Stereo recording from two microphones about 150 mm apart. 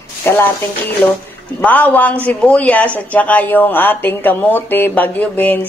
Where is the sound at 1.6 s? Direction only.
10° left (ahead or behind).